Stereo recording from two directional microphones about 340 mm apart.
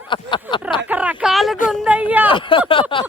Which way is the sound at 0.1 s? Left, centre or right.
Centre.